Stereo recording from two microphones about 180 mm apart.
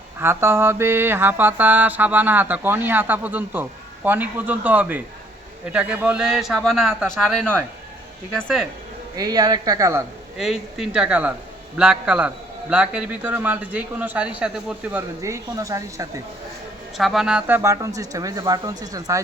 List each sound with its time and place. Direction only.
0.2 s mantra: 15° right (ahead or behind)
5.7 s a man's voice: 5° right (ahead or behind)
9.1 s a man's voice: 20° right (ahead or behind)
10.3 s a man's voice: centre (ahead or behind)
12.7 s mantra: 5° right (ahead or behind)
15.2 s mantra: 15° right (ahead or behind)
17.0 s mantra: centre (ahead or behind); by 19.2 s 20° right (ahead or behind)